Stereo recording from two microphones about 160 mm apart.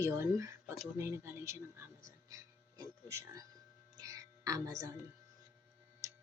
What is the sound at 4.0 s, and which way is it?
Music, 20° right (ahead or behind).